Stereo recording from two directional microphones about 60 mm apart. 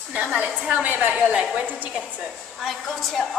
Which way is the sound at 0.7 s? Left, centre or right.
Right.